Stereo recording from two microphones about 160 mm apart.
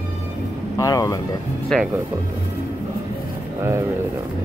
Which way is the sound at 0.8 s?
20° left (ahead or behind).